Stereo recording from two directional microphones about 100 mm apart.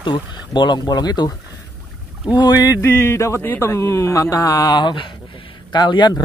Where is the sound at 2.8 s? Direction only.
25° left (ahead or behind).